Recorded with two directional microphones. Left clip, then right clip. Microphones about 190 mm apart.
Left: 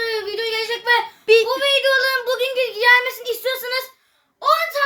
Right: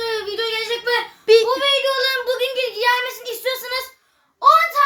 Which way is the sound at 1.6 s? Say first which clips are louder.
Left 1 dB; centre (ahead or behind).